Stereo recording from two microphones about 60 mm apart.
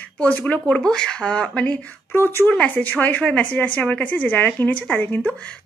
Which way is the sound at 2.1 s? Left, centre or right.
Left.